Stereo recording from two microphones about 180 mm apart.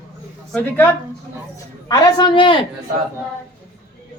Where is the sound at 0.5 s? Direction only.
10° left (ahead or behind).